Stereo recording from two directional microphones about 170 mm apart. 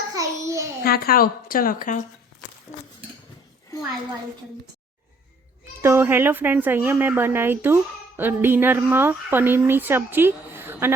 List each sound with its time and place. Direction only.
0.1 s a sound: 20° right (ahead or behind)
0.8 s a woman's voice: 65° left (ahead or behind)
5.8 s speech: 15° right (ahead or behind)